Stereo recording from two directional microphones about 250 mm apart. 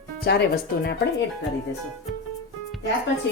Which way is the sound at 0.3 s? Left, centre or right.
Left.